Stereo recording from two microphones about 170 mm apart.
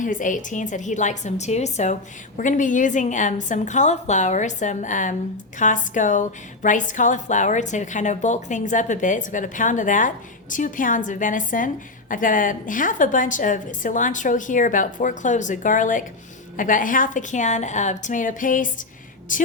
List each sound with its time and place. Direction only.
0.0 s a woman's voice: 50° left (ahead or behind)